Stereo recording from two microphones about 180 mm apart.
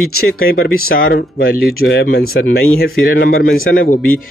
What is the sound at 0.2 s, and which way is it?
Speech, 55° left (ahead or behind).